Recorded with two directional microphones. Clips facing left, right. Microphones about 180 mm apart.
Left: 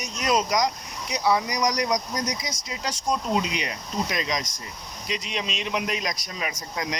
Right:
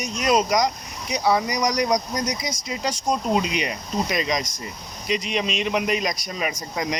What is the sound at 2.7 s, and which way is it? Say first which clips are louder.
Speech: right 3 dB; 10° right (ahead or behind).